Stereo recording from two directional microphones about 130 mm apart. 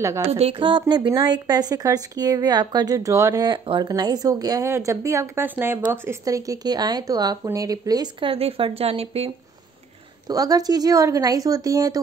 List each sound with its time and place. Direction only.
0.0 s a woman's voice: 20° right (ahead or behind)
0.3 s a woman's voice: 50° right (ahead or behind)
0.6 s a woman's voice: 35° right (ahead or behind)
10.2 s a woman's voice: 30° right (ahead or behind)